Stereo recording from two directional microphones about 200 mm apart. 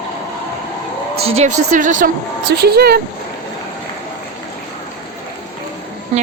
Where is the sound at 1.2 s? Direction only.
35° right (ahead or behind).